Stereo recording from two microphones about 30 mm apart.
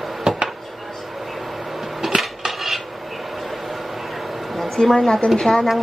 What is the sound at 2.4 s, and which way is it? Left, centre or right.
Cutlery, centre.